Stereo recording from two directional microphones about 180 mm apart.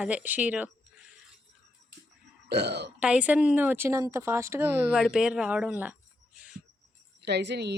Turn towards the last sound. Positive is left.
turn(degrees=-70)  # may be behind; listen again after turning